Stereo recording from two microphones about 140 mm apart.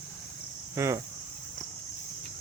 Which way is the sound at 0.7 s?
20° right (ahead or behind).